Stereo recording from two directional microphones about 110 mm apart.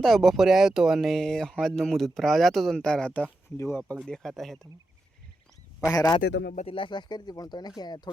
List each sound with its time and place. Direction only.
0.0 s speech: centre (ahead or behind); by 3.9 s 15° left (ahead or behind)
4.0 s speech: 5° left (ahead or behind)
5.8 s speech: 35° left (ahead or behind)
6.7 s speech: 45° left (ahead or behind)